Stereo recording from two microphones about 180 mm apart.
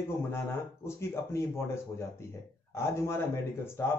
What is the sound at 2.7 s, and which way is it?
Speech, 15° left (ahead or behind).